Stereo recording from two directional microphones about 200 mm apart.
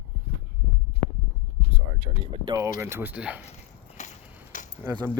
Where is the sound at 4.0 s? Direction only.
40° left (ahead or behind).